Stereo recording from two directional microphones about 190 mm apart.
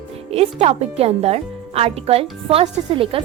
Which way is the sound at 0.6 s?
35° right (ahead or behind).